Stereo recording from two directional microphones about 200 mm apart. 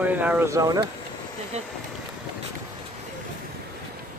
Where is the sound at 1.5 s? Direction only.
30° right (ahead or behind).